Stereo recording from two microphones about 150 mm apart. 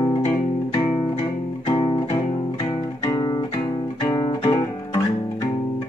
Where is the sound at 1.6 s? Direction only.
35° left (ahead or behind).